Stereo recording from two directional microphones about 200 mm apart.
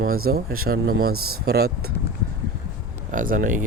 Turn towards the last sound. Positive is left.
turn(degrees=-45)  # may be behind; listen again after turning